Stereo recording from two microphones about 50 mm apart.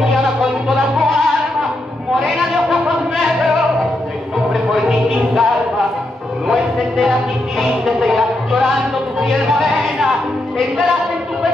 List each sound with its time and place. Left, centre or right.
0.0 s music: centre
2.2 s a sound: centre
5.3 s music: centre